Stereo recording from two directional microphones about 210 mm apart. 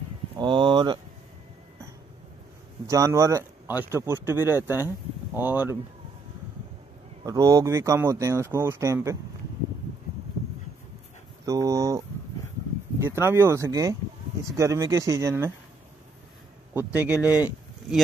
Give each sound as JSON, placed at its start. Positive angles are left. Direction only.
{"t": 0.4, "sound": "speech", "side_deg": -25}
{"t": 2.9, "sound": "speech", "side_deg": -15}
{"t": 7.2, "sound": "speech", "side_deg": -15}
{"t": 11.4, "sound": "speech", "side_deg": -15}
{"t": 13.0, "sound": "speech", "side_deg": -10}
{"t": 16.7, "sound": "speech", "side_deg": -10}